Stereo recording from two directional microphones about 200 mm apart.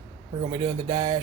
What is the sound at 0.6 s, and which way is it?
Speech, 20° right (ahead or behind).